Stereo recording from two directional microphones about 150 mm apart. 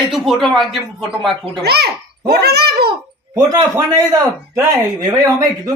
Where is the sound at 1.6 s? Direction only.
90° right.